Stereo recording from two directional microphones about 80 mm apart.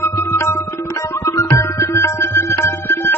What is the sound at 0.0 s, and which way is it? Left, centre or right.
Tabla, left.